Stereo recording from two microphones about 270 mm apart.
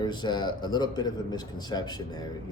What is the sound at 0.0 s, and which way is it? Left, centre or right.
A man's voice, centre.